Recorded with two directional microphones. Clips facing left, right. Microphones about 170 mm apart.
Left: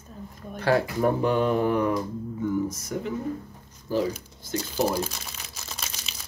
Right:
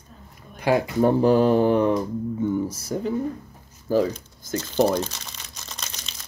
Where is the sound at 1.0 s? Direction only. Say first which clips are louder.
Right 9 dB; 35° right (ahead or behind).